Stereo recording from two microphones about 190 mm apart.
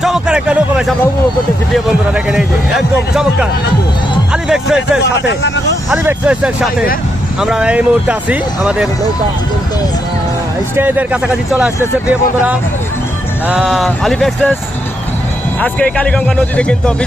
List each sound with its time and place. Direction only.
0.0 s a sound: centre (ahead or behind)
1.7 s a man's voice: centre (ahead or behind)
5.3 s speech: 65° left (ahead or behind)
5.9 s speech: 5° right (ahead or behind)
10.8 s speech: 10° right (ahead or behind)
15.6 s speech: 5° left (ahead or behind)